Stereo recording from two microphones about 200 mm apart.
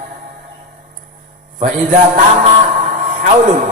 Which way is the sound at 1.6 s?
40° right (ahead or behind).